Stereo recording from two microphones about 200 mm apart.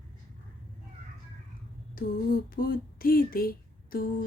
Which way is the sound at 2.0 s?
45° left (ahead or behind).